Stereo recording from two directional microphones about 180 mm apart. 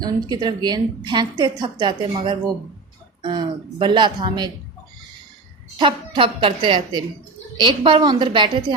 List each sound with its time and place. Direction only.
0.0 s a woman's voice: 20° right (ahead or behind)
5.8 s a woman's voice: 30° right (ahead or behind)